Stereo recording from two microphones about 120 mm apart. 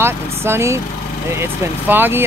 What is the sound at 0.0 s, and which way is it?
Speech, 20° right (ahead or behind).